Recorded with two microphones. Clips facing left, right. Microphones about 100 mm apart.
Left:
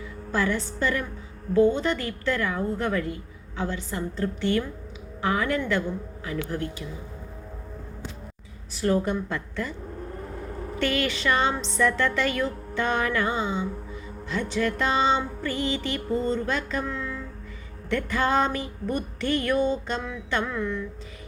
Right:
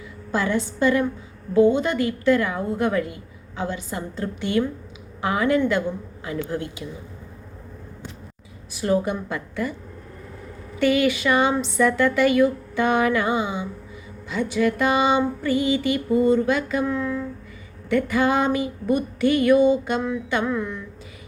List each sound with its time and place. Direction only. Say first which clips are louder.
0.3 s a woman's voice: right 3 dB; 20° right (ahead or behind)
1.5 s music: right 3 dB; 20° right (ahead or behind)
6.5 s a woman's voice: right 2 dB; 20° right (ahead or behind)
8.7 s music: right 2 dB; 15° right (ahead or behind)
10.8 s music: right 7 dB; 10° right (ahead or behind)